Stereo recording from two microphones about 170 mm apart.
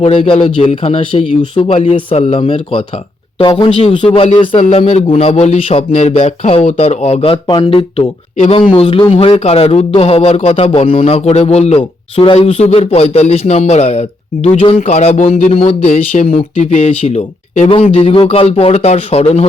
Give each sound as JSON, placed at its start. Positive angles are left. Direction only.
{"t": 0.0, "sound": "speech", "side_deg": 35}